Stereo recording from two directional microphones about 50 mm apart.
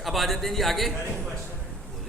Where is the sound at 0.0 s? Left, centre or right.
Centre.